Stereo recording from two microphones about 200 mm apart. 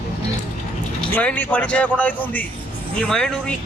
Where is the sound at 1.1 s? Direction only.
10° left (ahead or behind).